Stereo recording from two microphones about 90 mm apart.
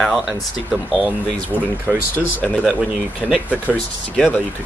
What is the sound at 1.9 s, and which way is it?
Speech, 20° right (ahead or behind).